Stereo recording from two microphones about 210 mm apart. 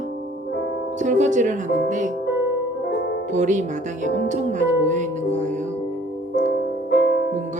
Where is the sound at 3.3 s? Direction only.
35° right (ahead or behind).